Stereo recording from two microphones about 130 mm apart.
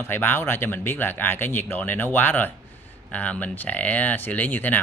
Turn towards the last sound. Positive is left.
turn(degrees=15)  # may be behind; listen again after turning